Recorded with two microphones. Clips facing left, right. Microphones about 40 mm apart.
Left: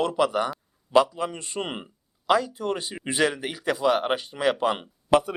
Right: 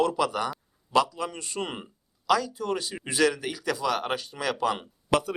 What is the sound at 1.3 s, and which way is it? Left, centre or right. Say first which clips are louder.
Speech: left 2 dB; left.